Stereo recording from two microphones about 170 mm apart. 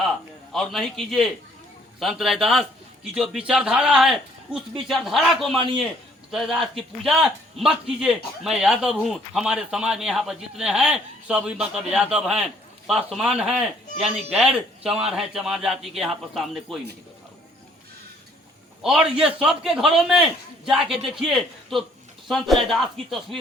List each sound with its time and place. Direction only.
0.5 s speech: centre (ahead or behind)
18.8 s speech: centre (ahead or behind)